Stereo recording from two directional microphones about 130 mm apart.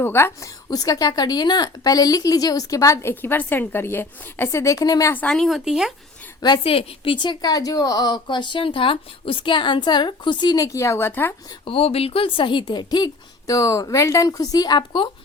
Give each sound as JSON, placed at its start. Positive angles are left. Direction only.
{"t": 0.0, "sound": "a woman's voice", "side_deg": 15}
{"t": 5.1, "sound": "speech", "side_deg": 5}
{"t": 6.4, "sound": "speech", "side_deg": 40}
{"t": 11.6, "sound": "a woman's voice", "side_deg": 45}